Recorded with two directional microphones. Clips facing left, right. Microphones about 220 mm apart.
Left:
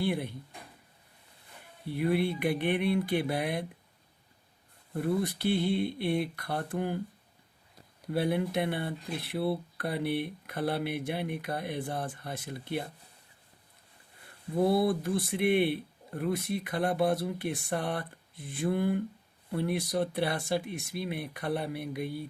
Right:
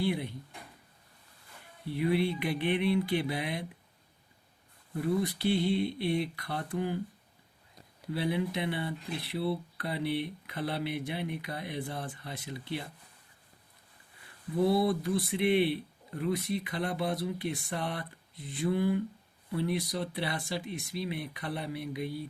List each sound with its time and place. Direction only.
0.0 s speech: 55° left (ahead or behind)
1.9 s speech: 50° left (ahead or behind)
4.9 s speech: 55° left (ahead or behind)
8.1 s speech: 50° left (ahead or behind)
14.5 s speech: 55° left (ahead or behind)